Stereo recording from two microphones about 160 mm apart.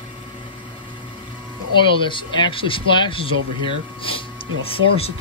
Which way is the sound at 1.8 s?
30° left (ahead or behind).